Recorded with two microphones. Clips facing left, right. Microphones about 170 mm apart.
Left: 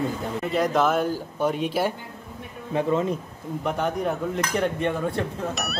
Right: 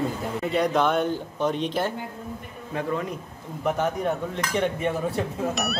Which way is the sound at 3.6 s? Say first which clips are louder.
Right 1 dB; centre (ahead or behind).